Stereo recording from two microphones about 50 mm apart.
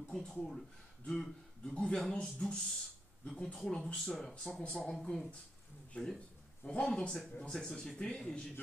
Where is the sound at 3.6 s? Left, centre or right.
Centre.